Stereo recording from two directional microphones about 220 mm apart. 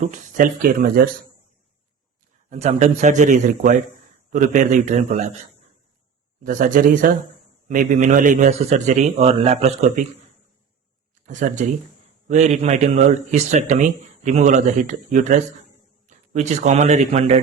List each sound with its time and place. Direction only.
0.0 s speech: 35° right (ahead or behind)
2.5 s speech: 30° right (ahead or behind)
6.4 s speech: 35° right (ahead or behind)
11.3 s a man's voice: 35° right (ahead or behind)